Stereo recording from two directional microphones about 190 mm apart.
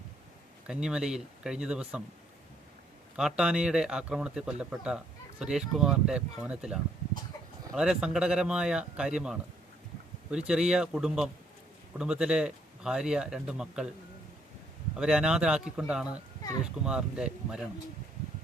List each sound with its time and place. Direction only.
0.7 s speech: 5° right (ahead or behind)
3.2 s speech: 5° right (ahead or behind)
14.9 s speech: 5° right (ahead or behind)